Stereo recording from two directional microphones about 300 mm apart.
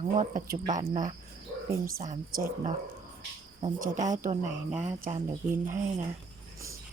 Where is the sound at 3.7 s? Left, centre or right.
Right.